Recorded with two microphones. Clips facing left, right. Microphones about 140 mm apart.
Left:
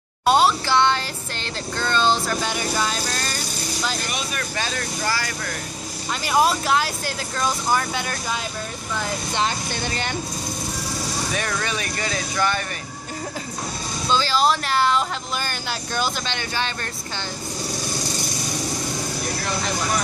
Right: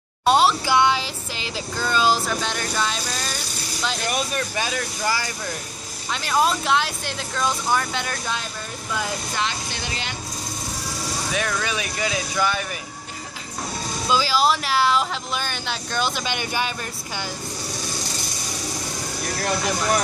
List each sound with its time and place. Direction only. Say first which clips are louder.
0.2 s a sound: even; centre (ahead or behind)
0.7 s music: even; 10° right (ahead or behind)
4.6 s speech: right 1 dB; 15° right (ahead or behind)
6.2 s music: left 1 dB; 5° left (ahead or behind)
9.5 s speech: left 4 dB; 45° left (ahead or behind)
11.3 s music: right 3 dB; centre (ahead or behind)
14.0 s music: even; 5° right (ahead or behind)
16.3 s speech: right 1 dB; 15° right (ahead or behind)